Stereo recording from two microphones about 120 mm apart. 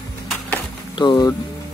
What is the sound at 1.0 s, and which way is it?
Speech, 35° left (ahead or behind).